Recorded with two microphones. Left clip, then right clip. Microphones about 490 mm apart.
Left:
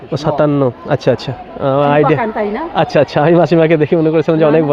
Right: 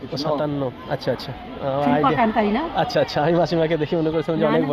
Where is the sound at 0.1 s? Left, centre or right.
Left.